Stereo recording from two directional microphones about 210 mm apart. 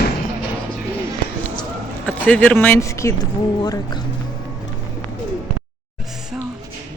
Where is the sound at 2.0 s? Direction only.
10° left (ahead or behind).